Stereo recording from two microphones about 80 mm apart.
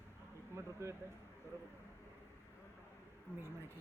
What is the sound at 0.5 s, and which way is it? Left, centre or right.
Speech, right.